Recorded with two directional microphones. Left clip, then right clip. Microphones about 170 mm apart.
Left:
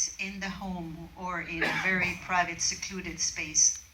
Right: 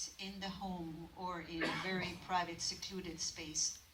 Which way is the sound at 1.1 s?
25° right (ahead or behind).